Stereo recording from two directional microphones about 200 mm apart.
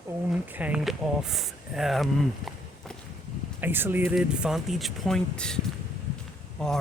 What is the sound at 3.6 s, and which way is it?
Speech, 10° right (ahead or behind).